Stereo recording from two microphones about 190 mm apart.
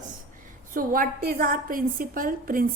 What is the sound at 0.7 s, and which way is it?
A woman's voice, 45° right (ahead or behind).